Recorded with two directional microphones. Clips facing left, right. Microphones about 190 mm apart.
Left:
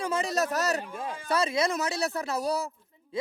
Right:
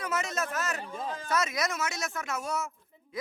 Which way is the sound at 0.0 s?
30° left (ahead or behind).